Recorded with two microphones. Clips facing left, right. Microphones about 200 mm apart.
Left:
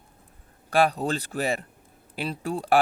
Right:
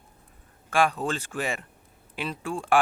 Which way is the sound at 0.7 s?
35° left (ahead or behind).